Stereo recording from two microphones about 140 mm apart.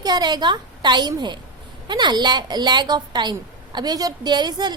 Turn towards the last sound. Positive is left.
turn(degrees=-30)  # may be behind; listen again after turning